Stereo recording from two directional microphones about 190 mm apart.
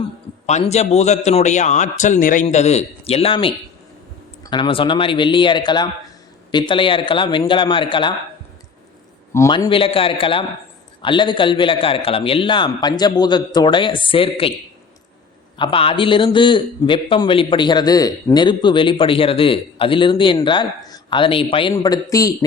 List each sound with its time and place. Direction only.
0.4 s a man's voice: 35° left (ahead or behind)
9.3 s a man's voice: 15° left (ahead or behind)
9.6 s a man's voice: 30° left (ahead or behind)
15.5 s a man's voice: 25° left (ahead or behind)